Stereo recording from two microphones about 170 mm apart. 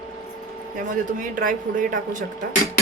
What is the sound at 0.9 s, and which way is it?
Speech, 50° right (ahead or behind).